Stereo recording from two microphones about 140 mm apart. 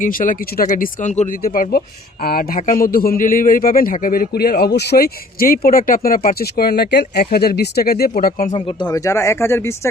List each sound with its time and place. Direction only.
0.0 s speech: 75° left (ahead or behind)
8.5 s speech: 35° left (ahead or behind); by 9.9 s 20° left (ahead or behind)